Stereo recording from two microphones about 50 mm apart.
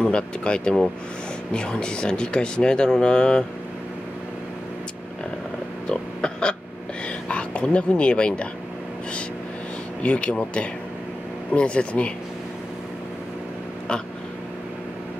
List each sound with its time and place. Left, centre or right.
0.0 s speech: centre
5.9 s a sound: centre
10.0 s speech: left